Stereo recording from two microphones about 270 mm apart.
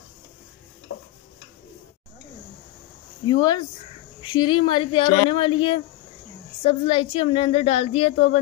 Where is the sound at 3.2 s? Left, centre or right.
Centre.